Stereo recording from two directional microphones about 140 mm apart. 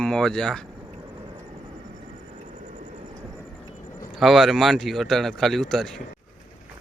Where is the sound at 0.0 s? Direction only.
5° left (ahead or behind).